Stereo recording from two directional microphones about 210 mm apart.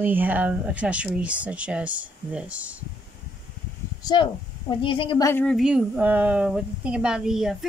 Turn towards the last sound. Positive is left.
turn(degrees=0)  # may be behind; listen again after turning